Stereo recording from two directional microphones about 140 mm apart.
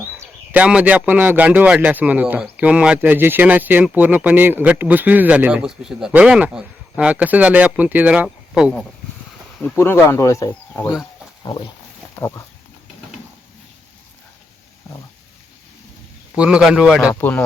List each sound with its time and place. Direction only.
0.2 s speech: 10° right (ahead or behind)
9.7 s speech: 20° left (ahead or behind)
16.3 s speech: 5° right (ahead or behind)
17.2 s speech: 15° left (ahead or behind)